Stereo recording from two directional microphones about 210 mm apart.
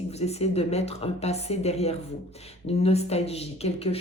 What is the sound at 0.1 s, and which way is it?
A woman's voice, 30° left (ahead or behind).